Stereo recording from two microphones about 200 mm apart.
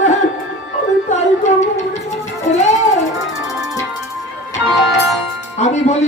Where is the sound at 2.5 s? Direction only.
35° left (ahead or behind).